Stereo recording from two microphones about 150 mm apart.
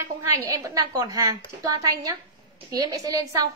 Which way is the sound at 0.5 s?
25° right (ahead or behind).